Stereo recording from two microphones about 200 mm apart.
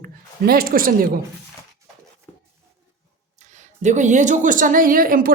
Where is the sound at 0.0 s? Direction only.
50° right (ahead or behind).